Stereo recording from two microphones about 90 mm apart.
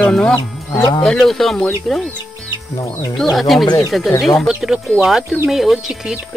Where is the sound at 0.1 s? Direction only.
10° left (ahead or behind).